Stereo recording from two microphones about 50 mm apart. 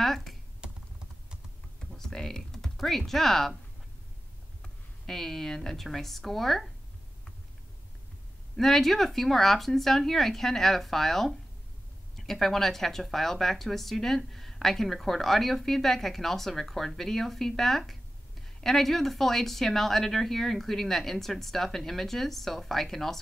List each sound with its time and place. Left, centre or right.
0.0 s computer keyboard: centre
0.6 s computer keyboard: centre
2.0 s typing: centre
4.6 s speech: centre
8.5 s a woman's voice: centre